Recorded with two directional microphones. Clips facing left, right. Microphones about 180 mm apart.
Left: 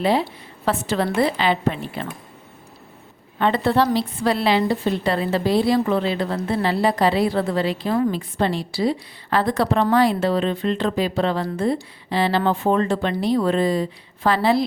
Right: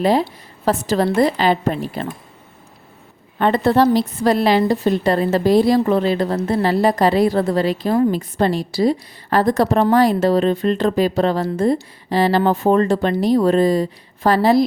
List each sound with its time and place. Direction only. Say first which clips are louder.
0.0 s a woman's voice: right 3 dB; 40° right (ahead or behind)
3.3 s a woman's voice: right 4 dB; 45° right (ahead or behind)